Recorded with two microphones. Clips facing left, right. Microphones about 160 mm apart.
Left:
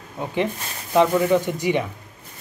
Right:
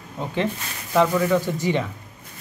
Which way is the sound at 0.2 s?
15° left (ahead or behind).